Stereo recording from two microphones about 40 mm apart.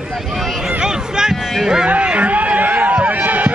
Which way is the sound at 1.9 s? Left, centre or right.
Right.